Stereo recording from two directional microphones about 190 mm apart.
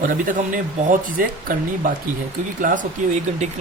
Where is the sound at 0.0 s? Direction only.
45° right (ahead or behind).